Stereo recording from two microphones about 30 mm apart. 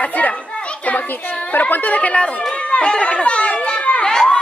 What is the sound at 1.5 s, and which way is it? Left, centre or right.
Speech, left.